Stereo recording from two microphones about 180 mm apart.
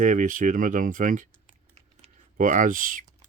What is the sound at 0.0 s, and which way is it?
Speech, 45° right (ahead or behind).